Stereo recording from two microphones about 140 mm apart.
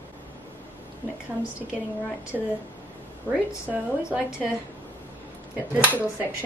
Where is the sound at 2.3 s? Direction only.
5° right (ahead or behind).